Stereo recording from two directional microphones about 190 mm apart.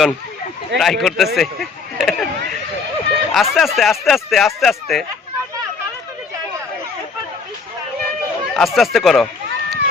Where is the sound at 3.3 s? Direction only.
Centre (ahead or behind).